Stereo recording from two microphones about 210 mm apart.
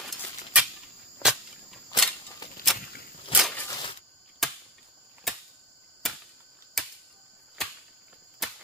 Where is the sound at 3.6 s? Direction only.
20° left (ahead or behind).